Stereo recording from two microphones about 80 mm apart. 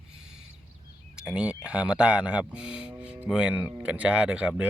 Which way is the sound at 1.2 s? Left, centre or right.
Centre.